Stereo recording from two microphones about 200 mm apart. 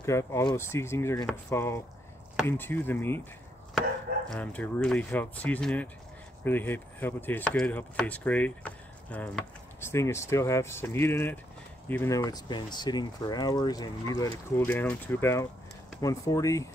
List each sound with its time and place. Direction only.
0.0 s speech: 15° left (ahead or behind)
4.3 s speech: 5° left (ahead or behind)